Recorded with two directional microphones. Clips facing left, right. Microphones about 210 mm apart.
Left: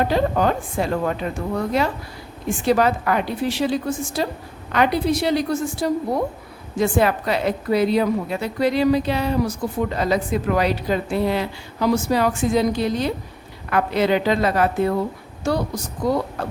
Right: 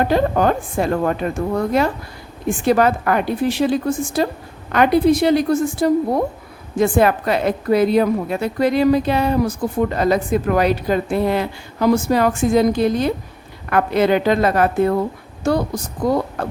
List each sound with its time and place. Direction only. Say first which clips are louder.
0.0 s a woman's voice: right 3 dB; 50° right (ahead or behind)